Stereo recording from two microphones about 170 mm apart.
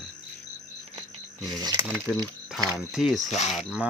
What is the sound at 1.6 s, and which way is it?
Speech, 20° right (ahead or behind).